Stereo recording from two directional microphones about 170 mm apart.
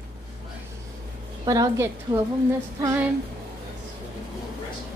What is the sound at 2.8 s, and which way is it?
Music, 15° right (ahead or behind).